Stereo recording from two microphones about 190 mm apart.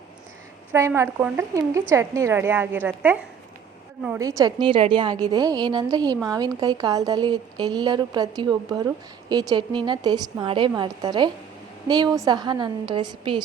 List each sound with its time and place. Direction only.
0.7 s a woman's voice: 15° right (ahead or behind)